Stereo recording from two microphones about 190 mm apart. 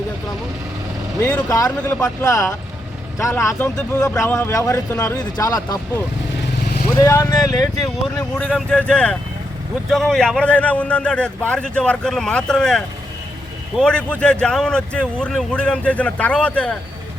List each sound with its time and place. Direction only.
1.2 s speech: 10° left (ahead or behind)
7.0 s speech: 15° left (ahead or behind)
8.4 s a man's voice: 5° left (ahead or behind)